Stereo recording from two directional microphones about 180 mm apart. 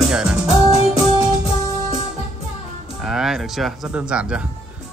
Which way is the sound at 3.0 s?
Centre (ahead or behind).